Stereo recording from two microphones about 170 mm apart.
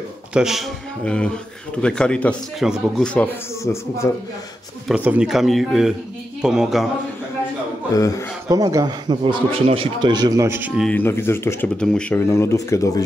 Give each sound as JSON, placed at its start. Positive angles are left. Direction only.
{"t": 0.3, "sound": "a man's voice", "side_deg": -5}
{"t": 4.8, "sound": "a man's voice", "side_deg": -5}
{"t": 8.5, "sound": "a man's voice", "side_deg": -20}
{"t": 10.9, "sound": "speech", "side_deg": 15}
{"t": 12.3, "sound": "speech", "side_deg": 15}